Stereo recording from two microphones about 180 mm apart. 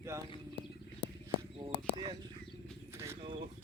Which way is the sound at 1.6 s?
25° right (ahead or behind).